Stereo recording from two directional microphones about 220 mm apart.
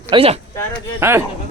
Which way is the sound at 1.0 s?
10° right (ahead or behind).